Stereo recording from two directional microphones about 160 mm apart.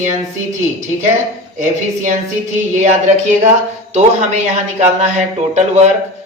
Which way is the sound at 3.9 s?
45° right (ahead or behind).